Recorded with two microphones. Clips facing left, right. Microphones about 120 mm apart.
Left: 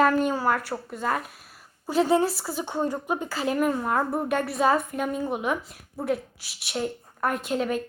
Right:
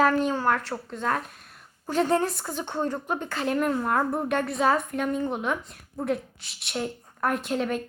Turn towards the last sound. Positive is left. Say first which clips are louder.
# left 1 dB
turn(degrees=0)  # may be behind; listen again after turning